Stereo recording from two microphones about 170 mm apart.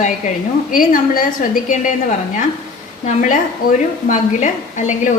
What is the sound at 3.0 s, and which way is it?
A woman's voice, 50° left (ahead or behind).